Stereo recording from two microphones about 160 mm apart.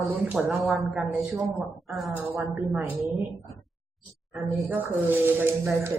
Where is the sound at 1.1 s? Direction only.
20° right (ahead or behind).